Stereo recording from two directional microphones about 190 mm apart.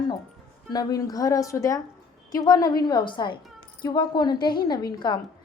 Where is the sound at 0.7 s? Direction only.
20° left (ahead or behind).